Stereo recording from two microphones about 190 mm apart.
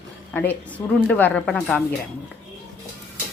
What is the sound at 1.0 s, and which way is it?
Speech, 5° left (ahead or behind).